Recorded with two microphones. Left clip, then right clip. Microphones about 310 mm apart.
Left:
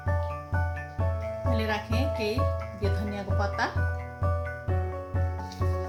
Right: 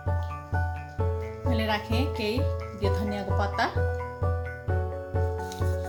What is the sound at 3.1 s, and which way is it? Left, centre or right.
Speech, right.